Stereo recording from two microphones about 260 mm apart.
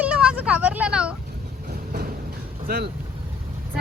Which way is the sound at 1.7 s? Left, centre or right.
Right.